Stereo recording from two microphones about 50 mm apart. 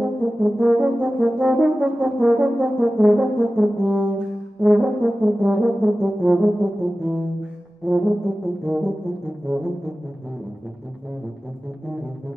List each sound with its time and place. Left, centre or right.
0.0 s brass instrument: right